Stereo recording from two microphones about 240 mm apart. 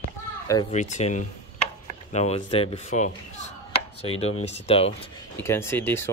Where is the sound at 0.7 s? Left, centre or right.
Left.